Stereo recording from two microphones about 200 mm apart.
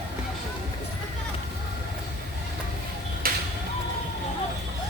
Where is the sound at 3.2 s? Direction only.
45° right (ahead or behind).